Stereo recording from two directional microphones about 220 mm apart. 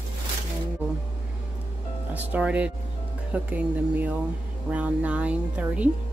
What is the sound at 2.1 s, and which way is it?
Speech, 5° right (ahead or behind).